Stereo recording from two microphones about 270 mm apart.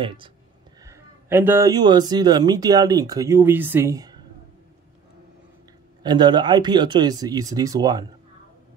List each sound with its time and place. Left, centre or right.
0.0 s speech: centre
6.0 s speech: centre